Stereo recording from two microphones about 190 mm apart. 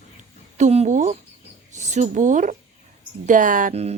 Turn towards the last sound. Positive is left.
turn(degrees=-35)  # may be behind; listen again after turning